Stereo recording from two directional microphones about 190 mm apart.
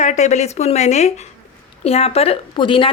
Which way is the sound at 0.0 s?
40° left (ahead or behind).